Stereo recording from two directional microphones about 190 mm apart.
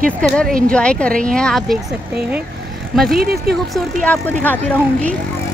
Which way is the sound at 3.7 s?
5° left (ahead or behind).